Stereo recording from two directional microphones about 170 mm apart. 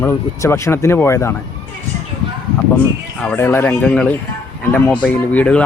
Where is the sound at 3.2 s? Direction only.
10° left (ahead or behind).